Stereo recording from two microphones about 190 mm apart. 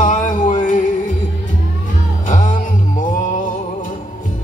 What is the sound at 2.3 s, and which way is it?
Music, 40° left (ahead or behind).